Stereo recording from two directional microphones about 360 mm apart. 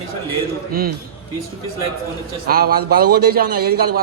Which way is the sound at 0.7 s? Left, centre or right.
Right.